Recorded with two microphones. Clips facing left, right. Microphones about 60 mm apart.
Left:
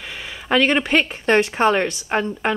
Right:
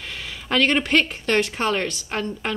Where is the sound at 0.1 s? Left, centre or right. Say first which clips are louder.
Left 4 dB; centre.